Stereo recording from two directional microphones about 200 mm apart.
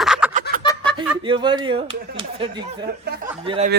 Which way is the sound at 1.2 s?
25° right (ahead or behind).